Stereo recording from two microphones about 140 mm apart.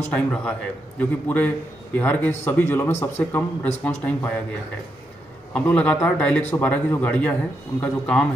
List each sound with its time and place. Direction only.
0.1 s a man's voice: 10° left (ahead or behind)
5.5 s a man's voice: 10° left (ahead or behind)